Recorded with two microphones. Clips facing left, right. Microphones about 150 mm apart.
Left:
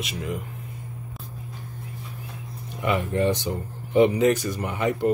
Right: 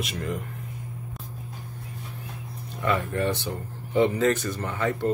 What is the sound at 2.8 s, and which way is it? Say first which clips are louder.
Speech: left 2 dB; 15° left (ahead or behind).